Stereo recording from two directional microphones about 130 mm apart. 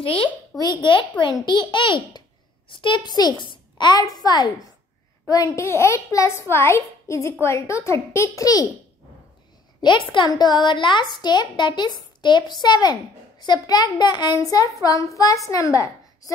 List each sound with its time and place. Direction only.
0.0 s a woman's voice: 40° left (ahead or behind)
9.8 s a woman's voice: 35° left (ahead or behind)